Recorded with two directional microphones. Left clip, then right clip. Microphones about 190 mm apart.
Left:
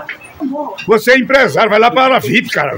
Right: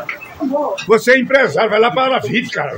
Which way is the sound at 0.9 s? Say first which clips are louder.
Left 2 dB; 20° left (ahead or behind).